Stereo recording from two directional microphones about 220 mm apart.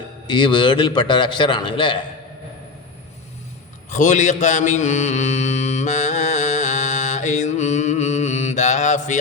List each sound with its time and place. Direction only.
0.3 s a man's voice: 20° left (ahead or behind)
3.8 s mantra: 35° left (ahead or behind)